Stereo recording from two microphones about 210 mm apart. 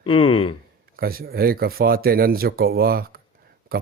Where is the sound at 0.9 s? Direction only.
45° right (ahead or behind).